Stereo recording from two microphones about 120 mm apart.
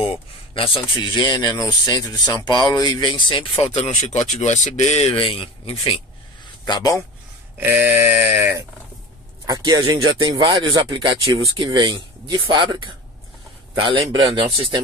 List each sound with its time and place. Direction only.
0.0 s a sound: 50° left (ahead or behind)
0.8 s speech: 40° left (ahead or behind)
3.7 s speech: 70° left (ahead or behind); by 5.9 s 45° left (ahead or behind)
6.6 s speech: 35° left (ahead or behind)
7.5 s a sound: 15° right (ahead or behind)
9.5 s speech: 35° right (ahead or behind)